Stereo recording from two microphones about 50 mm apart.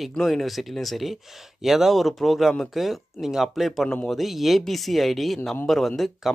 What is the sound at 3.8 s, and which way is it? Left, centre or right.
Speech, centre.